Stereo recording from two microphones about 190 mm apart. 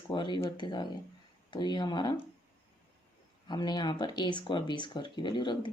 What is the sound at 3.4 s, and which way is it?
Speech, 20° left (ahead or behind).